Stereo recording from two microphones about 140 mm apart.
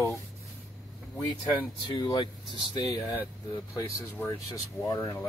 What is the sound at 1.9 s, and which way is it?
Speech, 35° left (ahead or behind).